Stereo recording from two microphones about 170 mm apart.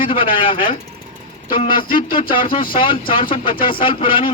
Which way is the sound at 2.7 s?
30° left (ahead or behind).